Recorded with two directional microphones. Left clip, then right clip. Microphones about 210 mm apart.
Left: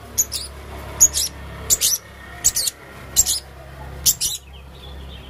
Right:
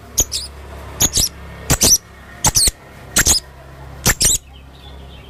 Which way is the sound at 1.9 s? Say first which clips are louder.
Right 9 dB; 30° right (ahead or behind).